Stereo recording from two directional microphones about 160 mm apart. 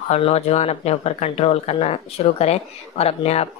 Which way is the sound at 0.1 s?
40° left (ahead or behind).